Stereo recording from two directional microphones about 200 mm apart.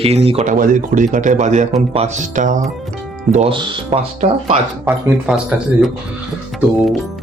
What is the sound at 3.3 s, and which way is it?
Speech, 30° right (ahead or behind).